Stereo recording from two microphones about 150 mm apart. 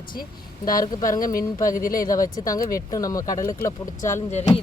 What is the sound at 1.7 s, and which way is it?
Speech, 65° left (ahead or behind).